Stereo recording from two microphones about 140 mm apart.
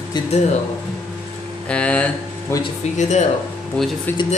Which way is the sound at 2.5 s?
20° left (ahead or behind).